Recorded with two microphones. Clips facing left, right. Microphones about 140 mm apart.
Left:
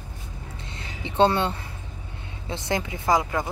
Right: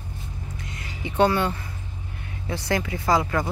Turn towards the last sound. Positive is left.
turn(degrees=20)  # may be behind; listen again after turning